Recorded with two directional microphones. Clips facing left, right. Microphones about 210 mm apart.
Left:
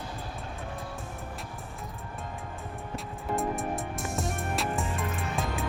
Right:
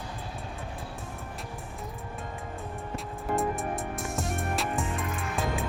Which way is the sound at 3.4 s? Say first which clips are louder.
Even; centre (ahead or behind).